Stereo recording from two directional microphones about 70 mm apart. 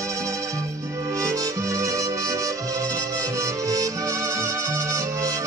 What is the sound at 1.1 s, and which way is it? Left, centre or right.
Music, right.